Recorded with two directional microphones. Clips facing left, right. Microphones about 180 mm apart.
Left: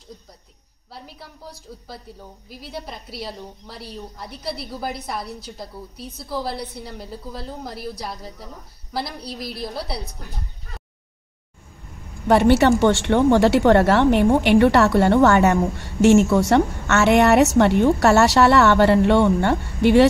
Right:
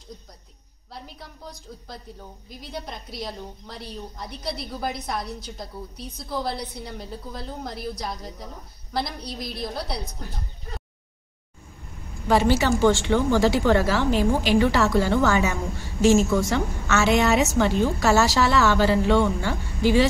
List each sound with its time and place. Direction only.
0.9 s a woman's voice: 5° left (ahead or behind)
12.3 s speech: 65° left (ahead or behind)